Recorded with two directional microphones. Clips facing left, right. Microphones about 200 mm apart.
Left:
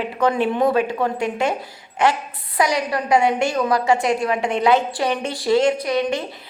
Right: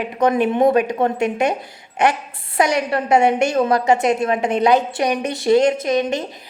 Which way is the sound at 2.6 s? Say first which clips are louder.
Right 2 dB; 25° right (ahead or behind).